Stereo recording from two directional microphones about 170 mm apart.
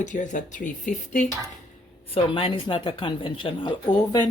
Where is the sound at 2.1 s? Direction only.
30° left (ahead or behind).